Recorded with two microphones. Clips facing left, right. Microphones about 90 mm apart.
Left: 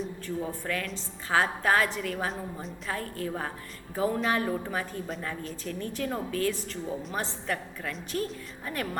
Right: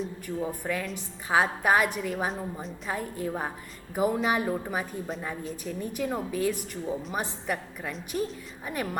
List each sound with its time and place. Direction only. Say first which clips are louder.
0.3 s a woman's voice: right 2 dB; 10° right (ahead or behind)
2.3 s a woman's voice: right 2 dB; centre (ahead or behind)
2.9 s a woman's voice: right 2 dB; 15° right (ahead or behind)